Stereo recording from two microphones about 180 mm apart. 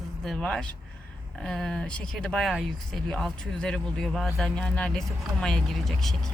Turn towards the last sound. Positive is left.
turn(degrees=0)  # may be behind; listen again after turning